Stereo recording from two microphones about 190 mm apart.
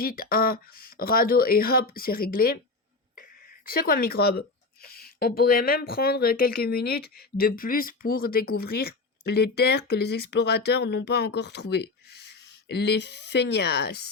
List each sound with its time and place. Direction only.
0.0 s speech: 50° left (ahead or behind)
3.7 s speech: 50° left (ahead or behind)